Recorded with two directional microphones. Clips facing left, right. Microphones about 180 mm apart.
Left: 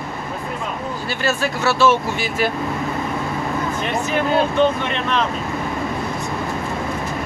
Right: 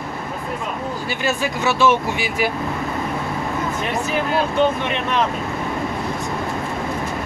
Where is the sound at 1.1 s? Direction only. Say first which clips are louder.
Left 1 dB; 15° right (ahead or behind).